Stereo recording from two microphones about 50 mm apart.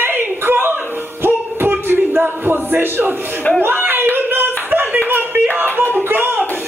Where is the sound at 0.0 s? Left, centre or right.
Right.